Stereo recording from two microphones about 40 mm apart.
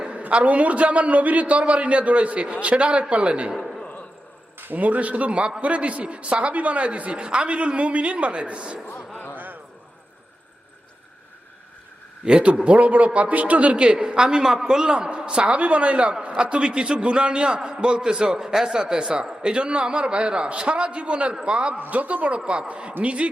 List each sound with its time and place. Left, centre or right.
0.1 s a man's voice: right
4.6 s a man's voice: right
9.1 s a sound: left
12.2 s a man's voice: right
13.7 s a man's voice: right
15.1 s a man's voice: right
21.8 s a man's voice: right
22.4 s a man's voice: right